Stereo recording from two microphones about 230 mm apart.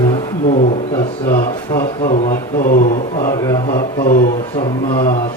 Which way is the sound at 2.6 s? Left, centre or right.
Left.